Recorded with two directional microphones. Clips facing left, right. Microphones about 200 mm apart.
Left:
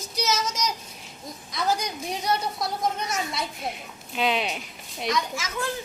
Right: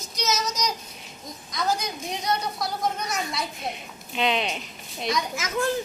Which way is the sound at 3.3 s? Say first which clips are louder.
Even; centre (ahead or behind).